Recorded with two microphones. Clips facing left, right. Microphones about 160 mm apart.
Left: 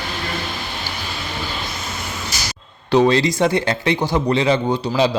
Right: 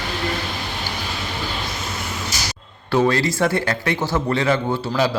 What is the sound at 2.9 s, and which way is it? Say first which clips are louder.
Speech: left 3 dB; 20° left (ahead or behind).